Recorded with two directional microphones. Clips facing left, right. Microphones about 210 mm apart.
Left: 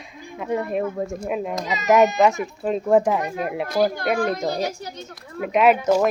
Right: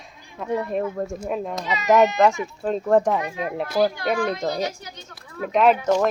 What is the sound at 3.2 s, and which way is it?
Speech, 45° left (ahead or behind).